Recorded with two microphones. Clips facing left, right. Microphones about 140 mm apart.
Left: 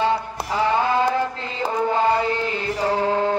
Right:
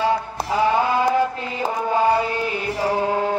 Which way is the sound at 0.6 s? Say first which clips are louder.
Right 1 dB; 15° right (ahead or behind).